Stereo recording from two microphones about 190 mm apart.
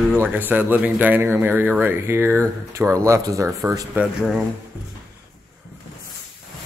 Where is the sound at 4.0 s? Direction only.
5° right (ahead or behind).